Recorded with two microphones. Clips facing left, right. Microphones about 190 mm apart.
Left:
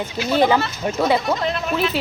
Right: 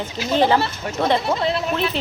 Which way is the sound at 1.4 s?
30° right (ahead or behind).